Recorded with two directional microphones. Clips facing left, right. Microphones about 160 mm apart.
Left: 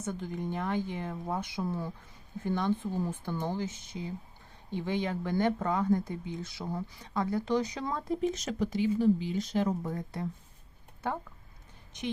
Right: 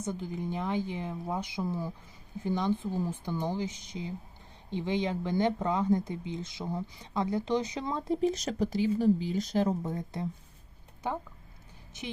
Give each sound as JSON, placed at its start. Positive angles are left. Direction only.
{"t": 0.0, "sound": "a woman's voice", "side_deg": -10}
{"t": 4.9, "sound": "speech", "side_deg": -20}
{"t": 9.8, "sound": "speech", "side_deg": -20}